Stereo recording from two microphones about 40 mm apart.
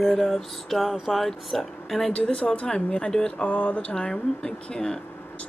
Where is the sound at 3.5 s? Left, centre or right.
Left.